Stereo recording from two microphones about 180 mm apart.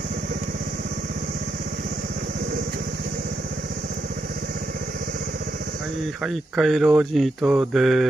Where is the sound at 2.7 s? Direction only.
55° right (ahead or behind).